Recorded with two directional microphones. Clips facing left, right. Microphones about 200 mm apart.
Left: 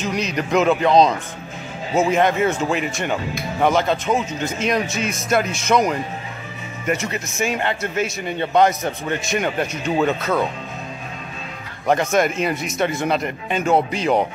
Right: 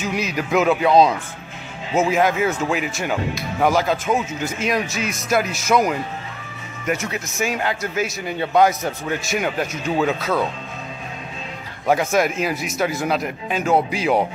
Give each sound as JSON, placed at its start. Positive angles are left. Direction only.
{"t": 0.0, "sound": "a man's voice", "side_deg": -5}
{"t": 11.9, "sound": "a man's voice", "side_deg": -5}